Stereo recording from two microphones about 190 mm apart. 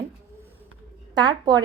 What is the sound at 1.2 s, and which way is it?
Speech, 20° right (ahead or behind).